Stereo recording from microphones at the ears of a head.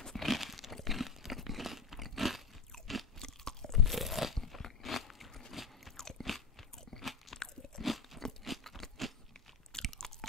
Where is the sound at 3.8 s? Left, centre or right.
Centre.